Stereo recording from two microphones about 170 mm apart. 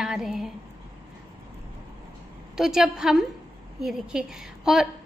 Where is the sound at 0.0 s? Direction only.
5° right (ahead or behind).